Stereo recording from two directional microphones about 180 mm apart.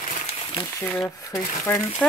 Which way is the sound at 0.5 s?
25° left (ahead or behind).